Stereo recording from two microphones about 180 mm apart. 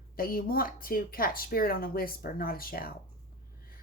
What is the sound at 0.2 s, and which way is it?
Speech, 55° left (ahead or behind).